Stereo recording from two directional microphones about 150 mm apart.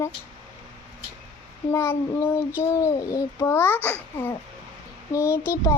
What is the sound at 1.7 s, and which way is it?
A child's voice, 15° left (ahead or behind).